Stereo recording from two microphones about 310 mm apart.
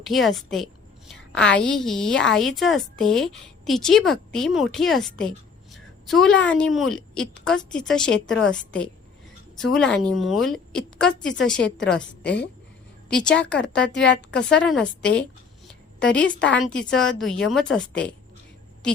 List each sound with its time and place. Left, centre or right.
0.0 s a woman's voice: centre
11.5 s a woman's voice: left
13.2 s a woman's voice: centre
13.9 s a woman's voice: left
14.5 s a woman's voice: centre
15.6 s a sound: centre
16.8 s a woman's voice: centre